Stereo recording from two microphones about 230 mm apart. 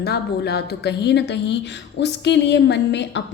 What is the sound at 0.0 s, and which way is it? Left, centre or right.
Speech, left.